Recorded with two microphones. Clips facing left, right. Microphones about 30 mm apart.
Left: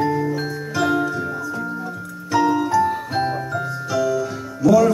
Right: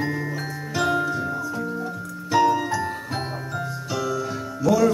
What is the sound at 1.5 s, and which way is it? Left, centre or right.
Music, centre.